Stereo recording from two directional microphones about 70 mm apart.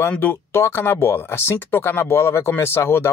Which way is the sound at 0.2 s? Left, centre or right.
Left.